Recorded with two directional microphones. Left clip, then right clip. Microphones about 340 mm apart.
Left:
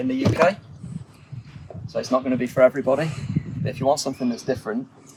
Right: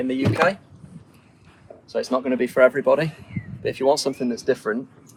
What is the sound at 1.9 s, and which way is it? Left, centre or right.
Speech, centre.